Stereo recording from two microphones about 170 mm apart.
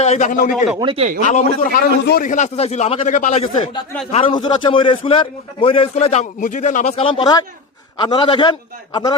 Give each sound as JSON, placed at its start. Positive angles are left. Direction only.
{"t": 0.0, "sound": "a man's voice", "side_deg": 45}
{"t": 0.8, "sound": "speech", "side_deg": -30}
{"t": 1.3, "sound": "a man's voice", "side_deg": 45}